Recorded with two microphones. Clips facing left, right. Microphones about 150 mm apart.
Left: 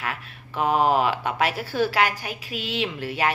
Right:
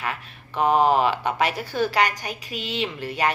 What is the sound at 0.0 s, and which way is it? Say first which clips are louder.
Speech: right 1 dB; 5° left (ahead or behind).